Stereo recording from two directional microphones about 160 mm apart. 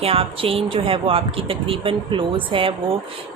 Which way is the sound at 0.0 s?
35° right (ahead or behind).